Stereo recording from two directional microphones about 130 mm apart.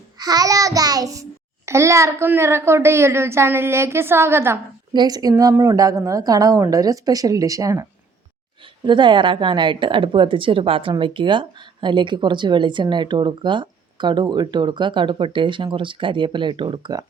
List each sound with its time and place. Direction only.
0.2 s a woman's voice: 30° right (ahead or behind)
4.9 s a woman's voice: 30° right (ahead or behind)
8.9 s speech: 35° right (ahead or behind)